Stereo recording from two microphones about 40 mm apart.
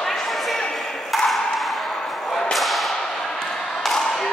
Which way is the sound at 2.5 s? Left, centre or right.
Centre.